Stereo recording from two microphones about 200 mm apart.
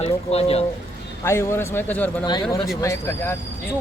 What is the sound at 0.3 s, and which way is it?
Speech, 30° left (ahead or behind).